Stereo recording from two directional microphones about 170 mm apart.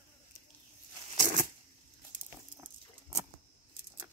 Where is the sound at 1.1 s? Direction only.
45° right (ahead or behind).